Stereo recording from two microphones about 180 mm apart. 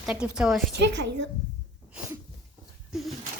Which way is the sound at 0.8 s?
75° right (ahead or behind).